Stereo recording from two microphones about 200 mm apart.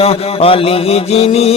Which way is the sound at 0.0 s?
30° left (ahead or behind).